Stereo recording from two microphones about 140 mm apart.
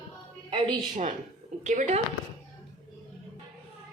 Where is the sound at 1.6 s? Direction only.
60° right (ahead or behind).